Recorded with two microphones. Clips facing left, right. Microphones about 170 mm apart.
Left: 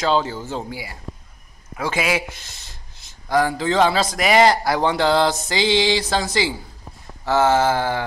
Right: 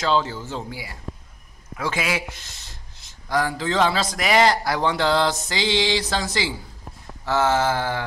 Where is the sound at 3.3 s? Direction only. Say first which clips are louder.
Left 4 dB; 20° left (ahead or behind).